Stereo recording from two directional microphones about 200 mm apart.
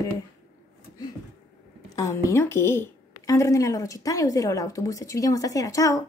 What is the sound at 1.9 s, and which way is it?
A woman's voice, 15° left (ahead or behind).